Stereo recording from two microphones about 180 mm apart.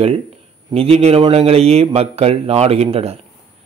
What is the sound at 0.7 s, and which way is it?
A man's voice, 35° right (ahead or behind).